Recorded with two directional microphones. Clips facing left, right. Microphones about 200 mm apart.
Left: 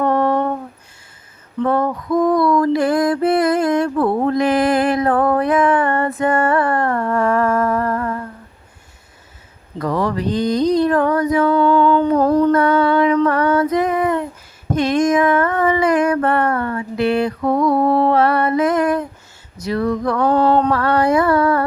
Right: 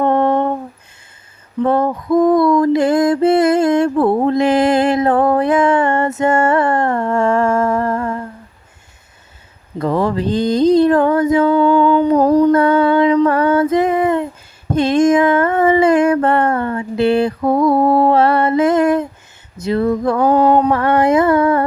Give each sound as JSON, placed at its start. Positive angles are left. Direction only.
{"t": 0.0, "sound": "a sound", "side_deg": -25}
{"t": 1.6, "sound": "music", "side_deg": -25}
{"t": 9.7, "sound": "mantra", "side_deg": -25}
{"t": 11.5, "sound": "humming", "side_deg": -15}
{"t": 12.5, "sound": "music", "side_deg": -30}
{"t": 13.2, "sound": "female singing", "side_deg": -30}
{"t": 14.7, "sound": "a sound", "side_deg": -30}
{"t": 19.5, "sound": "mantra", "side_deg": -25}
{"t": 20.2, "sound": "a sound", "side_deg": -10}
{"t": 20.7, "sound": "humming", "side_deg": -25}